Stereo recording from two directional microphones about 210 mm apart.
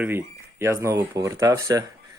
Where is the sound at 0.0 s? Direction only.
10° right (ahead or behind).